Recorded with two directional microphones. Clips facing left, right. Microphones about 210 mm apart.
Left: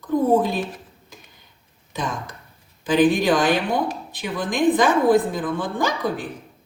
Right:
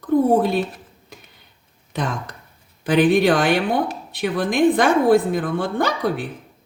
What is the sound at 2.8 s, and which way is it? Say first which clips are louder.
Speech: right 2 dB; 60° right (ahead or behind).